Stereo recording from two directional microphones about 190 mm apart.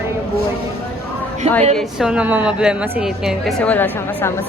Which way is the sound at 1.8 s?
5° right (ahead or behind).